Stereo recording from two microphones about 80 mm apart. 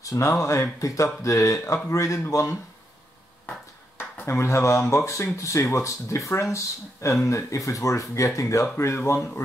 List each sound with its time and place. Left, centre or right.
0.0 s speech: left
4.3 s speech: left